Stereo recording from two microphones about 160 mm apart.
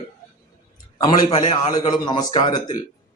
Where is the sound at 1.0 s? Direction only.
25° left (ahead or behind).